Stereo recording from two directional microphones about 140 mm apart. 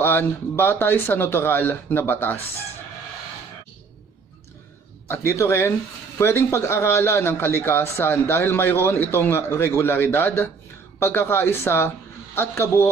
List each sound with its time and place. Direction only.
0.0 s a man's voice: 15° left (ahead or behind)
5.0 s a man's voice: 20° left (ahead or behind)